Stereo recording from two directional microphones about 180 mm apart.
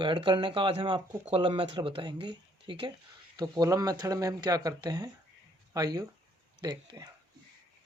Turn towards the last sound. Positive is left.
turn(degrees=-25)  # may be behind; listen again after turning